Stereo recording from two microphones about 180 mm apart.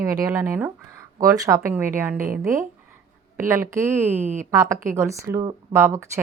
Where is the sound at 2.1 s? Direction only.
50° right (ahead or behind).